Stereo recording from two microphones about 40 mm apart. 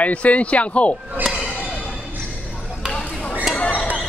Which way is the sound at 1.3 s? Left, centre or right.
Centre.